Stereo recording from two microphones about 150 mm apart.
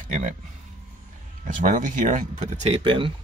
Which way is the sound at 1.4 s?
60° right (ahead or behind).